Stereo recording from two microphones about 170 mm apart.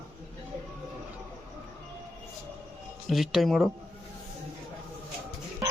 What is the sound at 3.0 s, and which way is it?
Speech, centre (ahead or behind).